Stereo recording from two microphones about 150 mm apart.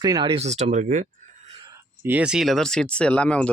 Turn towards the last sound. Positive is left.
turn(degrees=10)  # may be behind; listen again after turning